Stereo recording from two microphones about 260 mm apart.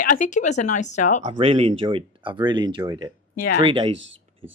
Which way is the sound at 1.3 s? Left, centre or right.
Centre.